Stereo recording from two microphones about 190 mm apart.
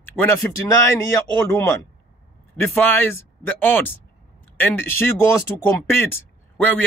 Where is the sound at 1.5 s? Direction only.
15° left (ahead or behind).